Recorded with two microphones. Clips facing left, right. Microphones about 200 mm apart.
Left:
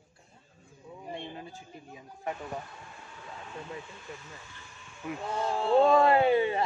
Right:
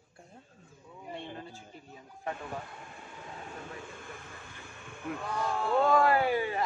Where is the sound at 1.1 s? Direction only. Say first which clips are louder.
Left 1 dB; 15° left (ahead or behind).